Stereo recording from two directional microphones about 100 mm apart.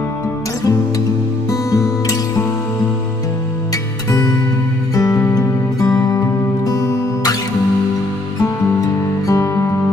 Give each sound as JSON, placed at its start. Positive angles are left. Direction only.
{"t": 1.5, "sound": "music", "side_deg": 35}
{"t": 4.9, "sound": "music", "side_deg": 35}
{"t": 9.3, "sound": "music", "side_deg": 30}